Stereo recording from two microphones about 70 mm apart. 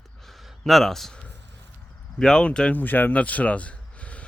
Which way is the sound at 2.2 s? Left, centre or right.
Centre.